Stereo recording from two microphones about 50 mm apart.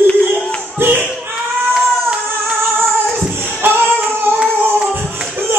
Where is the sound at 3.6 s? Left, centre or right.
Right.